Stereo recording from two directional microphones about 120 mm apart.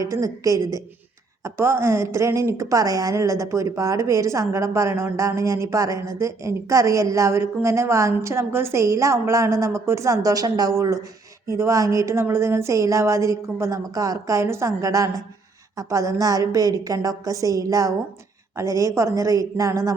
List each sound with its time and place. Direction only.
0.0 s a woman's voice: 30° right (ahead or behind)